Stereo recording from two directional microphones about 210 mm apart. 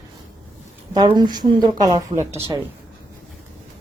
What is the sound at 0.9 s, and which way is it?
Speech, 20° right (ahead or behind).